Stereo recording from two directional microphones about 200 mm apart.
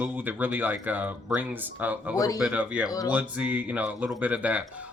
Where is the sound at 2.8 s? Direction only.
15° left (ahead or behind).